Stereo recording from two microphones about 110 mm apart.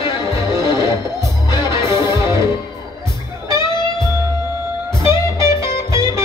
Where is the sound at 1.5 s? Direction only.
30° right (ahead or behind).